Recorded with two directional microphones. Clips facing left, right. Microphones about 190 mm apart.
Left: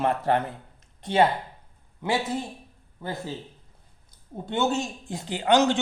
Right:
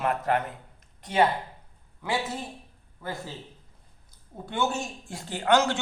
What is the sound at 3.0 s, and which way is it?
Speech, 30° left (ahead or behind).